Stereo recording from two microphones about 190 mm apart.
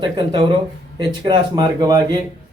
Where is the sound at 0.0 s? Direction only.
25° right (ahead or behind).